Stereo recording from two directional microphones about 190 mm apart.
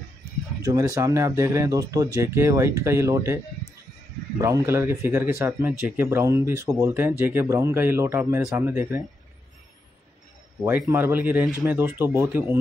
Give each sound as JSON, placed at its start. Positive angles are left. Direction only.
{"t": 0.6, "sound": "speech", "side_deg": -20}
{"t": 4.4, "sound": "speech", "side_deg": -15}
{"t": 10.9, "sound": "speech", "side_deg": -10}